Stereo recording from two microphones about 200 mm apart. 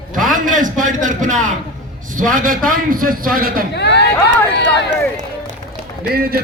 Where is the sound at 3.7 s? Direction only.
55° left (ahead or behind).